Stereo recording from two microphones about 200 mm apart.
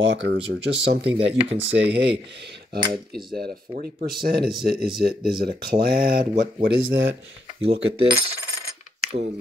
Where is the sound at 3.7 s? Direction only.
50° right (ahead or behind).